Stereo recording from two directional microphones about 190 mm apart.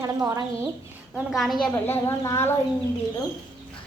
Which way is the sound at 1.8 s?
10° left (ahead or behind).